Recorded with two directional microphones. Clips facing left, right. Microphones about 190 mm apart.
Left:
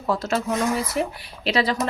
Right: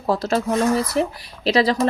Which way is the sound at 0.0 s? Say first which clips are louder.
Right 3 dB; 35° right (ahead or behind).